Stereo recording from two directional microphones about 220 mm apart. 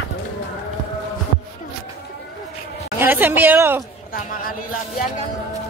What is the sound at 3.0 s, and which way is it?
Speech, 10° right (ahead or behind).